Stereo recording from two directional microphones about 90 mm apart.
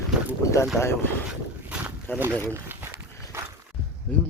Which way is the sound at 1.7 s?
10° right (ahead or behind).